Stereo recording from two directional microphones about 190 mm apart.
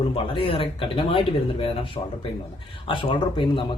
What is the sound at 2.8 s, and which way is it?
Speech, 25° left (ahead or behind).